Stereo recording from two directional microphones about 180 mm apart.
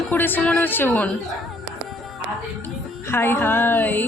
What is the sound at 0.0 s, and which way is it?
Speech, 10° left (ahead or behind).